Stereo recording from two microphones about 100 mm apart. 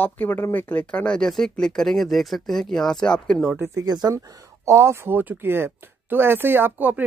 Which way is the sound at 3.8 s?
40° right (ahead or behind).